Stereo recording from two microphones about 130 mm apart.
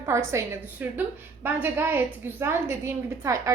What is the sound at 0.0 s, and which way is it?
A woman's voice, 20° right (ahead or behind).